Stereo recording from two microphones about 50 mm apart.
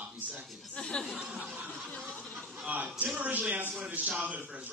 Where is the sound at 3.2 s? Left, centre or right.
Right.